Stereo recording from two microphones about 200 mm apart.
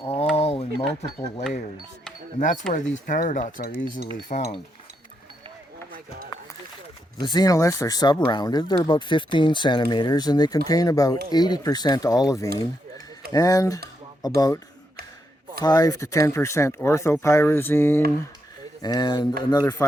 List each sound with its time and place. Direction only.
0.3 s a sound: 30° left (ahead or behind)
0.8 s speech: 30° left (ahead or behind)
2.4 s cutlery: 40° left (ahead or behind)
7.2 s speech: 20° left (ahead or behind)
15.6 s speech: 20° left (ahead or behind)